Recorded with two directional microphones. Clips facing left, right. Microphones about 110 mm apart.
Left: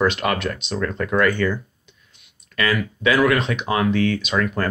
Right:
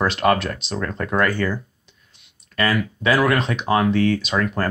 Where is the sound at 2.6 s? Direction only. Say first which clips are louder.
Right 1 dB; 35° right (ahead or behind).